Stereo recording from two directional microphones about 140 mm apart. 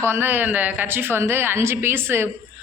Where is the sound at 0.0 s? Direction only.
15° right (ahead or behind).